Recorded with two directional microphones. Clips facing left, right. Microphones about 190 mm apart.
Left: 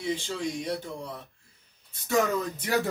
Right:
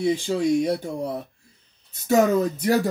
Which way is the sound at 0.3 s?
40° right (ahead or behind).